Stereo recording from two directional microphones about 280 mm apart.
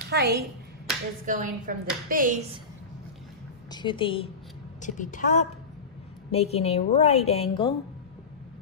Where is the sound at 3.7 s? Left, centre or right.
Centre.